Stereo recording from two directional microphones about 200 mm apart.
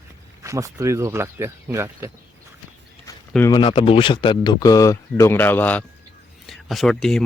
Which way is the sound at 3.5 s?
25° left (ahead or behind).